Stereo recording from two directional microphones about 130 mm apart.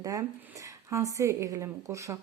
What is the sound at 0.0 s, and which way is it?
Speech, 25° right (ahead or behind).